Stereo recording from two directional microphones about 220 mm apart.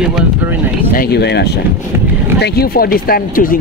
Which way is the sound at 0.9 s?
45° left (ahead or behind).